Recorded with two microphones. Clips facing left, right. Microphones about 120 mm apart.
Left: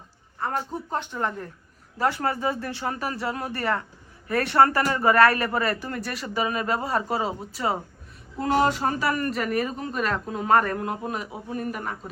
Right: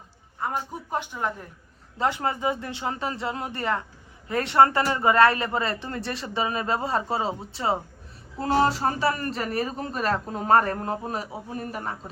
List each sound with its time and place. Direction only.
0.3 s a woman's voice: 10° right (ahead or behind); by 11.9 s 30° right (ahead or behind)